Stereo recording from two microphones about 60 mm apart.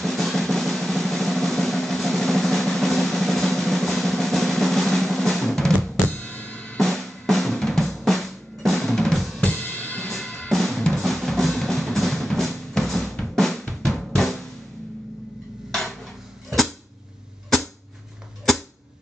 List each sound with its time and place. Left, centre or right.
0.0 s drum: centre
6.0 s drum: left
6.8 s drum: centre
9.4 s drum kit: left
10.5 s drum: centre